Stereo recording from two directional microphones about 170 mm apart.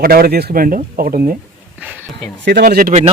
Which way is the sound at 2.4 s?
70° right (ahead or behind).